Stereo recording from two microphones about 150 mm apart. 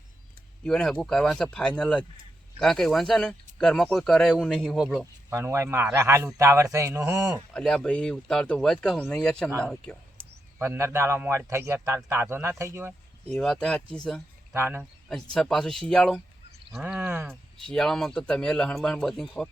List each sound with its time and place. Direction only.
0.6 s speech: 5° left (ahead or behind)
5.3 s a man's voice: 20° right (ahead or behind)
7.5 s speech: 5° left (ahead or behind)
10.6 s a man's voice: 15° right (ahead or behind)
13.2 s speech: 5° left (ahead or behind)
14.5 s a man's voice: 15° right (ahead or behind)
15.1 s a man's voice: 5° left (ahead or behind)
17.6 s speech: 5° left (ahead or behind)